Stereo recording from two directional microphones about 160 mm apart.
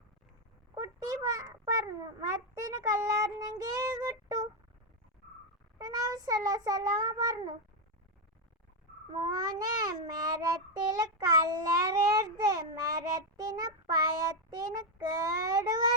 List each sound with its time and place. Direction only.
0.8 s a sound: 20° right (ahead or behind)
2.2 s child singing: 20° right (ahead or behind)
5.8 s child singing: 25° right (ahead or behind)
9.1 s child singing: 25° right (ahead or behind)